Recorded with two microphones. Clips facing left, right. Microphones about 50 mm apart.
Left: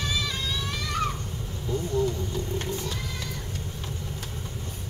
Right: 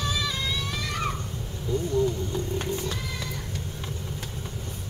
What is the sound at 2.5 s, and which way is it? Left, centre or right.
Cat, right.